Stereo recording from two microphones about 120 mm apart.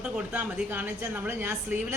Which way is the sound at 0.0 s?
15° right (ahead or behind).